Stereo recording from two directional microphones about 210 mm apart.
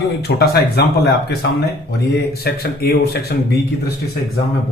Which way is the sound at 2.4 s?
50° left (ahead or behind).